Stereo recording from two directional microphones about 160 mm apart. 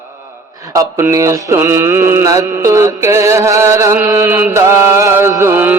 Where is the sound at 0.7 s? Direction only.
20° right (ahead or behind).